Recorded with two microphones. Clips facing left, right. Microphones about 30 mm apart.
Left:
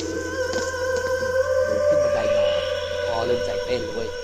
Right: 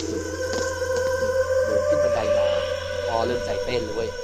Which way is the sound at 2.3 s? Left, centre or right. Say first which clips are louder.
Left 1 dB; centre.